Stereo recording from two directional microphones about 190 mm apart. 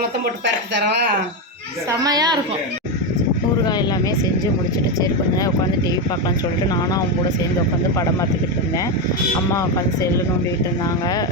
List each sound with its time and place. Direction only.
1.9 s a woman's voice: 20° right (ahead or behind)